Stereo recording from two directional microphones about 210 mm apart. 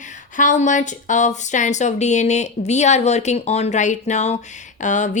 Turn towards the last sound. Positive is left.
turn(degrees=35)  # may be behind; listen again after turning